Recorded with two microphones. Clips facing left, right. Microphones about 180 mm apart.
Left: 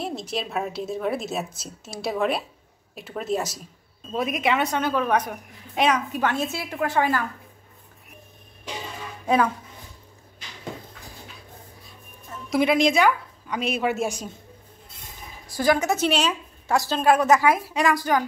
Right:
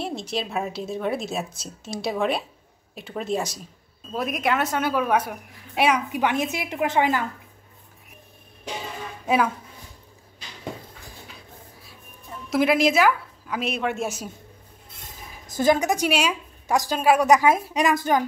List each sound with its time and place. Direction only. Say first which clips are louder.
0.0 s a woman's voice: right 1 dB; centre (ahead or behind); by 7.2 s 20° right (ahead or behind)
9.2 s speech: left 1 dB; 5° right (ahead or behind)
12.4 s a woman's voice: even; centre (ahead or behind)
15.5 s a woman's voice: right 1 dB; 20° right (ahead or behind)